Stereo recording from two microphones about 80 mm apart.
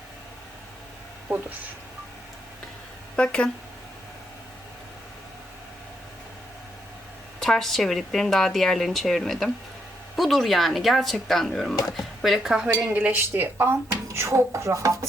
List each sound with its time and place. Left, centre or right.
3.2 s speech: centre
7.3 s speech: centre
12.9 s speech: right